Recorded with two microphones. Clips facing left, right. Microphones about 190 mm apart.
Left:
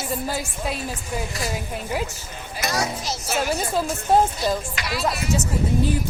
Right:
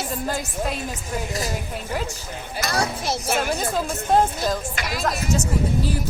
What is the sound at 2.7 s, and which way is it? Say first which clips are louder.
Speech: right 3 dB; 55° right (ahead or behind).